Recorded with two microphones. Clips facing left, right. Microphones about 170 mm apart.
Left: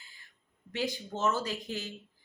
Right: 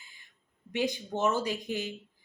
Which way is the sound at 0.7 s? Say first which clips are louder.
Right 3 dB; 15° right (ahead or behind).